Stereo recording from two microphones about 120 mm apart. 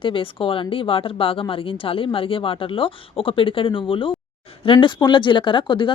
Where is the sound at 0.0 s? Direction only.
45° left (ahead or behind).